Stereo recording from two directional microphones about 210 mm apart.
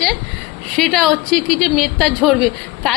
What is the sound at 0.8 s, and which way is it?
A woman's voice, centre (ahead or behind).